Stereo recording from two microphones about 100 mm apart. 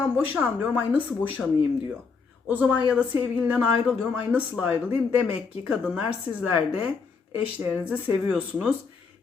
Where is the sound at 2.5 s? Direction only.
10° right (ahead or behind).